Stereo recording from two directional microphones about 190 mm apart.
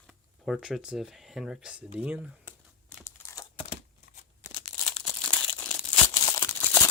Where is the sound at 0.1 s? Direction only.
Centre (ahead or behind).